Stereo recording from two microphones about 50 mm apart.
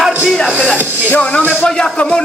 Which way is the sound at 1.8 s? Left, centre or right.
Left.